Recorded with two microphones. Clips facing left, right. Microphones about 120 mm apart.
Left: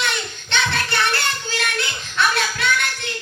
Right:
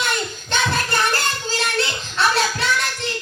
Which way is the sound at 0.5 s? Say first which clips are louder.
Right 1 dB; 40° right (ahead or behind).